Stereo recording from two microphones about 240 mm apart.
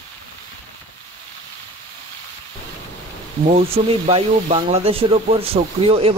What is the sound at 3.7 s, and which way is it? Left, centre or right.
Speech, right.